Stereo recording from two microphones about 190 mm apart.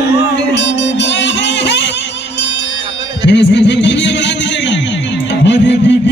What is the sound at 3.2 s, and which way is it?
Speech, 65° left (ahead or behind).